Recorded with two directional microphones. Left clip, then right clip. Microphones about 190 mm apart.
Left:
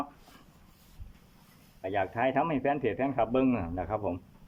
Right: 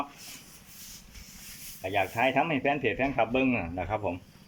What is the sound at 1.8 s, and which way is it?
Speech, centre (ahead or behind).